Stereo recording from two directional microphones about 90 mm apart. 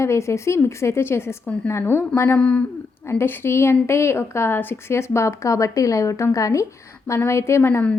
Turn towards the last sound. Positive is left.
turn(degrees=30)  # may be behind; listen again after turning